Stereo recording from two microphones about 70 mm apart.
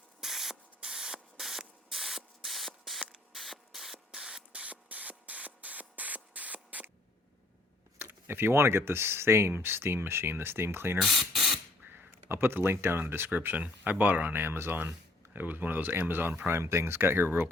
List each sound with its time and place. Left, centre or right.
0.2 s spray: centre; by 6.9 s right
7.9 s speech: right
11.0 s speech: centre
11.8 s speech: right